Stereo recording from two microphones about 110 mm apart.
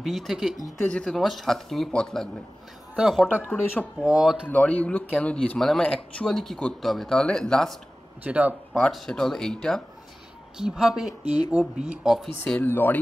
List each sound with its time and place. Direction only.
0.0 s speech: centre (ahead or behind)
0.7 s speech: 10° left (ahead or behind)
3.0 s speech: 5° right (ahead or behind)
4.5 s speech: 15° left (ahead or behind)
8.2 s speech: 15° right (ahead or behind)
8.7 s speech: centre (ahead or behind)
12.4 s speech: 15° left (ahead or behind)